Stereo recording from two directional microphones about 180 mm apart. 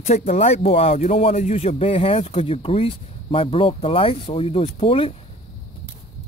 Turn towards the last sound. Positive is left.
turn(degrees=30)  # may be behind; listen again after turning